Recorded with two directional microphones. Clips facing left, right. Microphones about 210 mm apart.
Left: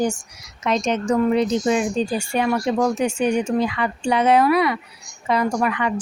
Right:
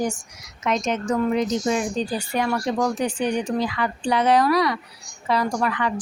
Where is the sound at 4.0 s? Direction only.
10° left (ahead or behind).